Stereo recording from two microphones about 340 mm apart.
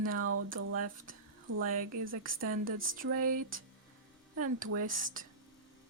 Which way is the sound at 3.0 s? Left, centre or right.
Right.